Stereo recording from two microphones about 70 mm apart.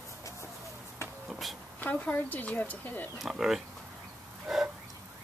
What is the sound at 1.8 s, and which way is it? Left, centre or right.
Speech, left.